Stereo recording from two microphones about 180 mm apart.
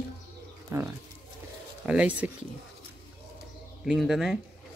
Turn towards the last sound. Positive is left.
turn(degrees=0)  # may be behind; listen again after turning